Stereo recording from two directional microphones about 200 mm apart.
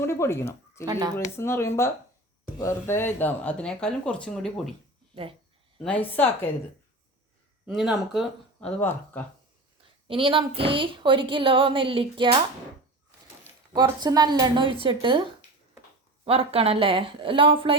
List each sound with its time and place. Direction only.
0.0 s speech: 15° left (ahead or behind)
0.9 s speech: 20° right (ahead or behind)
1.1 s speech: 15° left (ahead or behind)
5.1 s speech: 25° right (ahead or behind)
5.8 s speech: 5° left (ahead or behind)
7.7 s speech: centre (ahead or behind)
8.8 s speech: 10° left (ahead or behind)
10.1 s speech: 25° right (ahead or behind)
13.4 s speech: 20° right (ahead or behind)